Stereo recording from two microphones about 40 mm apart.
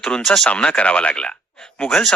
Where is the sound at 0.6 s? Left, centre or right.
Left.